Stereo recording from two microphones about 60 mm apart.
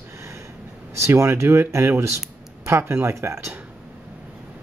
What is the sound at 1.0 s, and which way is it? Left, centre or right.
Speech, right.